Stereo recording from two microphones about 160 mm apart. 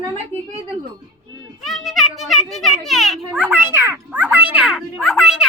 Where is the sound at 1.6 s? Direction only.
Centre (ahead or behind).